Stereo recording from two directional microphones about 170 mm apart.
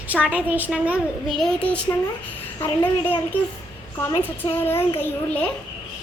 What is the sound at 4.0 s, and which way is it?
Speech, 15° left (ahead or behind).